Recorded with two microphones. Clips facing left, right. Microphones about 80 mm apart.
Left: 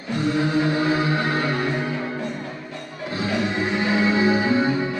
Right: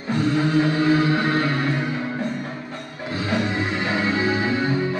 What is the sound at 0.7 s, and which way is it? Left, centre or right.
Music, centre.